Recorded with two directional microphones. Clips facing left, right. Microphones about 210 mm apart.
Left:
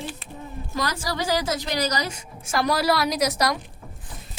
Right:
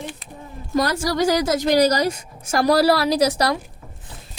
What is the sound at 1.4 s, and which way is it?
A woman's voice, 45° right (ahead or behind).